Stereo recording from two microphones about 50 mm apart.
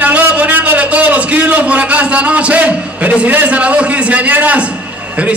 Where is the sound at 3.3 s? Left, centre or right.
Right.